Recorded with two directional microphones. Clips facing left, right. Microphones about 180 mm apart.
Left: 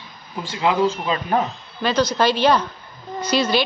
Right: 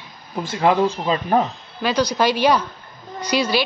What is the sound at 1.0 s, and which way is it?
Speech, 30° right (ahead or behind).